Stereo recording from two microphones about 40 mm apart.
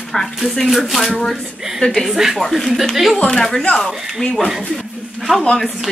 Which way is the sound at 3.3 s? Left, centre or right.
Centre.